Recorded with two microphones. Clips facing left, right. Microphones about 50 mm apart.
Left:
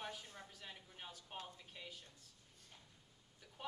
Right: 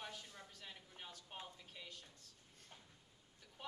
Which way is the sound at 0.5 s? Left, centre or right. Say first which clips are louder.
Left 1 dB; centre.